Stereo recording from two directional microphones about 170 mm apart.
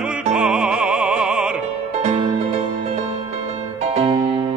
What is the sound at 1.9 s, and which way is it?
Music, 40° right (ahead or behind).